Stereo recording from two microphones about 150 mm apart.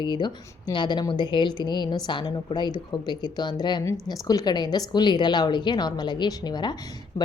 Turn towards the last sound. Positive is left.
turn(degrees=30)  # may be behind; listen again after turning